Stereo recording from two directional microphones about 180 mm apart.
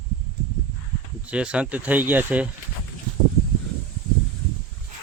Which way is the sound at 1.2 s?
5° right (ahead or behind).